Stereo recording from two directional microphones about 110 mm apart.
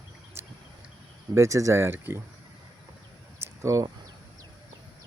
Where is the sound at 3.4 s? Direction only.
30° right (ahead or behind).